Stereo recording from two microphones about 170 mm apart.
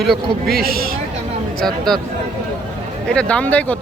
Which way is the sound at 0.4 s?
65° right (ahead or behind).